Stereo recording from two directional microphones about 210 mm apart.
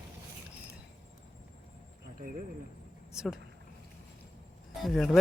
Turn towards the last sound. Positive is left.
turn(degrees=0)  # may be behind; listen again after turning